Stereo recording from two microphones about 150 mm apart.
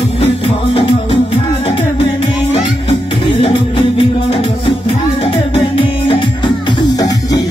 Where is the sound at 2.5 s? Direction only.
35° left (ahead or behind).